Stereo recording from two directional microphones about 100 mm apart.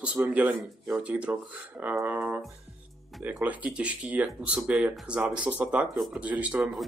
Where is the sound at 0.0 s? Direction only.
15° right (ahead or behind).